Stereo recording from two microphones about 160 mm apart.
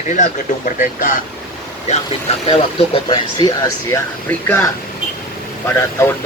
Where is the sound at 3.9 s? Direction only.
15° left (ahead or behind).